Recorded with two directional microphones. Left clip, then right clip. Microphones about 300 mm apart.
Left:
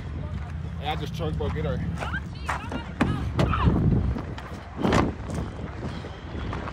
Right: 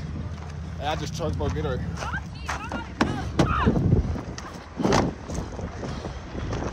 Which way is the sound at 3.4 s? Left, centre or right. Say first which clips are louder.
Right 3 dB; right.